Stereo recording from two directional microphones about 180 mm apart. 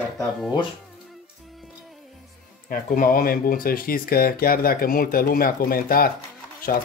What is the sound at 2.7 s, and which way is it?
Speech, 50° left (ahead or behind).